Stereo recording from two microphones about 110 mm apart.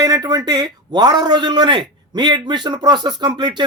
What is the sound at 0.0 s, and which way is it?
A man's voice, 35° right (ahead or behind).